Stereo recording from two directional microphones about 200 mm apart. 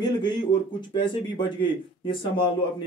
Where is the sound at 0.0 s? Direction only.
20° left (ahead or behind).